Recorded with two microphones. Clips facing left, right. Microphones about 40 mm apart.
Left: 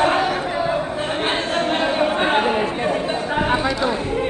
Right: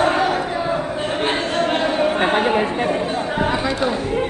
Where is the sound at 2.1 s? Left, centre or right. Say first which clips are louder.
Right 1 dB; right.